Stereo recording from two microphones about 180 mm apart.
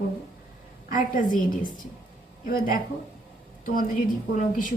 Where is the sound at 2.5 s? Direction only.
50° left (ahead or behind).